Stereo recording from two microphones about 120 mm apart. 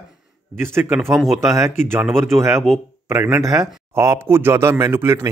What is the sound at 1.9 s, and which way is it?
A man's voice, 20° right (ahead or behind).